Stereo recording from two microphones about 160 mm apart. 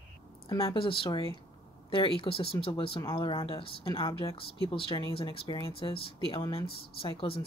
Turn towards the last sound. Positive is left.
turn(degrees=35)  # may be behind; listen again after turning